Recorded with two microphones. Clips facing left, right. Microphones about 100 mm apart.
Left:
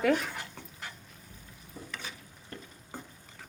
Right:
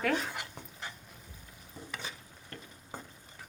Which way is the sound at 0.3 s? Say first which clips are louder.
Even; 15° right (ahead or behind).